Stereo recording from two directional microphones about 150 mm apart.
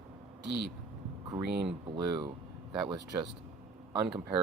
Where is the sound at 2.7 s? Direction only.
30° right (ahead or behind).